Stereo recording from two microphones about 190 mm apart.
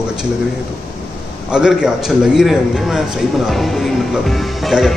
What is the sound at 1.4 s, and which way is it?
A man's voice, 5° right (ahead or behind).